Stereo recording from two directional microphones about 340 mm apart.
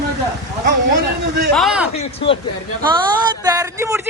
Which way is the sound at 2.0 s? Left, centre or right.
Centre.